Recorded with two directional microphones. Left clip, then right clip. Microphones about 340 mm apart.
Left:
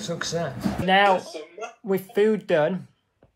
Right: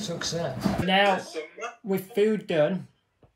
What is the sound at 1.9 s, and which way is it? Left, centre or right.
Speech, centre.